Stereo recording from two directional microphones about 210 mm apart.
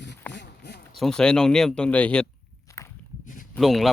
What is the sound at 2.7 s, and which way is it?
Walk, 15° left (ahead or behind).